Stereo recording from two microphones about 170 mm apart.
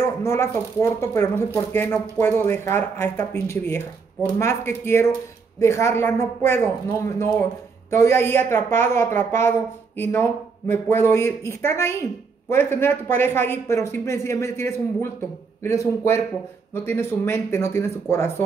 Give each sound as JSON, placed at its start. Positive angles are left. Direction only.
{"t": 0.2, "sound": "a woman's voice", "side_deg": 15}